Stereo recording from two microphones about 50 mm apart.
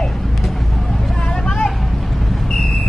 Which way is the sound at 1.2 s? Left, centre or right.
Left.